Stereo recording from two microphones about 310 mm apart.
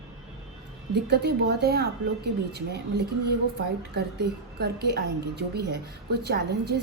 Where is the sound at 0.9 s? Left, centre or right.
Right.